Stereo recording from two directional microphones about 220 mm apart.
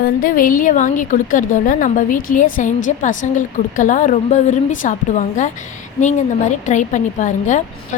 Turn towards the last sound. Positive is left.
turn(degrees=35)  # may be behind; listen again after turning